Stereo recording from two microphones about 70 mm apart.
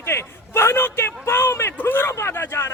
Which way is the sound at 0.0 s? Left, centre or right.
Left.